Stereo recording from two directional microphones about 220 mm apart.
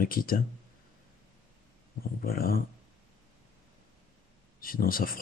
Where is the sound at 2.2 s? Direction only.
40° left (ahead or behind).